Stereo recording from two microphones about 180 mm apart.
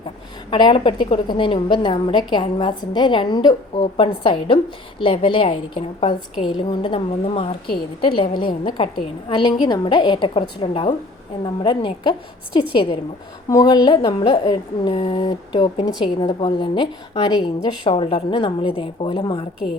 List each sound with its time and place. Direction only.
0.5 s a woman's voice: 25° left (ahead or behind)